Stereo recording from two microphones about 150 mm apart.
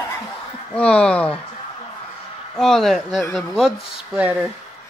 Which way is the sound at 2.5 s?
5° left (ahead or behind).